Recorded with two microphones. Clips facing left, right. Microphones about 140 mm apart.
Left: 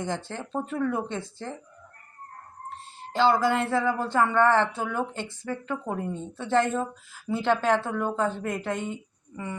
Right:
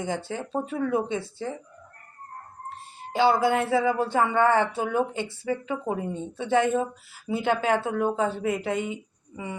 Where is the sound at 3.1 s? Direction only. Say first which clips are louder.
Right 1 dB; 10° right (ahead or behind).